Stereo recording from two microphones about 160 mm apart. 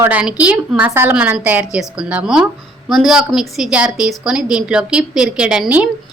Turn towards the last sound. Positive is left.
turn(degrees=-5)  # may be behind; listen again after turning